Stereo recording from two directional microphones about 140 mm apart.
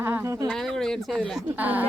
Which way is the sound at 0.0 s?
15° right (ahead or behind).